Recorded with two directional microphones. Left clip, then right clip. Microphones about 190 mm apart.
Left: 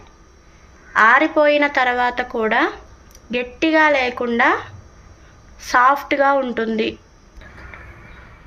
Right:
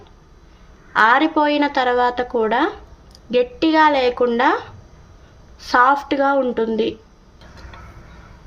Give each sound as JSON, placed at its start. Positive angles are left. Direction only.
{"t": 0.9, "sound": "a woman's voice", "side_deg": -40}
{"t": 5.7, "sound": "a woman's voice", "side_deg": -40}